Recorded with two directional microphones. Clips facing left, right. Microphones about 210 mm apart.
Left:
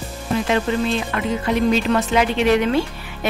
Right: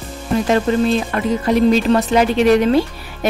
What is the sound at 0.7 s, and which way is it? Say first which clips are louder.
Speech: right 5 dB; 40° right (ahead or behind).